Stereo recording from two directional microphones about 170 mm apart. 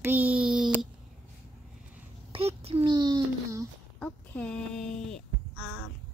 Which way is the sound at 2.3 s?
35° right (ahead or behind).